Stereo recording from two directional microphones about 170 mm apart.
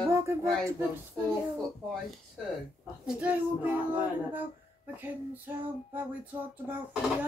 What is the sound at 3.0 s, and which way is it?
Music, 10° right (ahead or behind).